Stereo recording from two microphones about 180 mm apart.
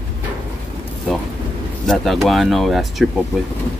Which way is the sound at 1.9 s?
Centre (ahead or behind).